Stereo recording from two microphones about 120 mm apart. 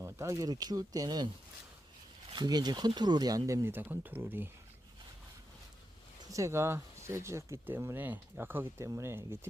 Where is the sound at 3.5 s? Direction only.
25° right (ahead or behind).